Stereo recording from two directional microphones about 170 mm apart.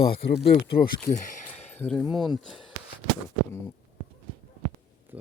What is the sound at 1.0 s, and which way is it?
Speech, 50° left (ahead or behind).